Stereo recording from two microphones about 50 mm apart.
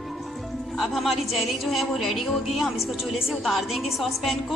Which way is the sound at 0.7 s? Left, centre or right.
Centre.